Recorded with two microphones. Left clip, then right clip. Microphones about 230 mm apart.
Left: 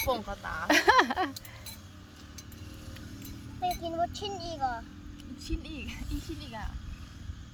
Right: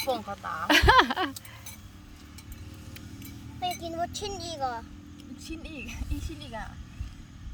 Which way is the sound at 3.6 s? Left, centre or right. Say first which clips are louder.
Left 1 dB; right.